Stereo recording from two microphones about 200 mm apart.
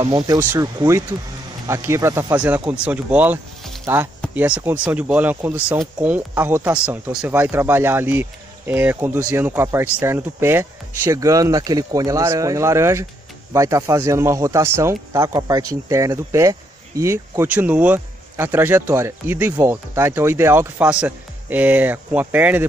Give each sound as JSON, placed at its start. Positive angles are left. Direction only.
{"t": 0.0, "sound": "speech", "side_deg": -25}
{"t": 0.4, "sound": "speech", "side_deg": -15}